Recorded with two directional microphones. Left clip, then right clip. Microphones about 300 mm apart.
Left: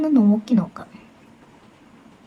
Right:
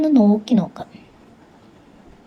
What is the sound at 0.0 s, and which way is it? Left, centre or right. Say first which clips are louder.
Speech: right 3 dB; centre.